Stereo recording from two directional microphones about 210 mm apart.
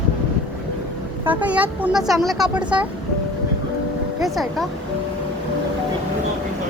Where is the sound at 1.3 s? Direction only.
5° right (ahead or behind).